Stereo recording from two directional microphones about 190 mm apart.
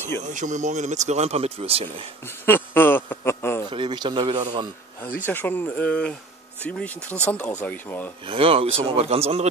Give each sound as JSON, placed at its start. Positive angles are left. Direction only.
{"t": 0.3, "sound": "speech", "side_deg": -40}
{"t": 2.2, "sound": "a sound", "side_deg": 10}
{"t": 3.7, "sound": "speech", "side_deg": -25}
{"t": 5.0, "sound": "speech", "side_deg": 10}
{"t": 8.3, "sound": "speech", "side_deg": -30}